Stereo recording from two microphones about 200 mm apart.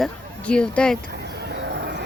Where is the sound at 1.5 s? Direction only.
55° right (ahead or behind).